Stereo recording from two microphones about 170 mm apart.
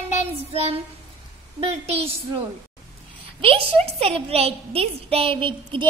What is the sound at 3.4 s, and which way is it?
A woman's voice, 35° right (ahead or behind).